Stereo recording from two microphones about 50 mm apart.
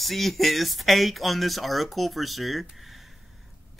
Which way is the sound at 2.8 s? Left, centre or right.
Centre.